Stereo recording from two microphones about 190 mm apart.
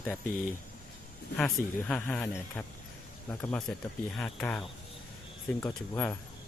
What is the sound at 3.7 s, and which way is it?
A man's voice, 10° left (ahead or behind).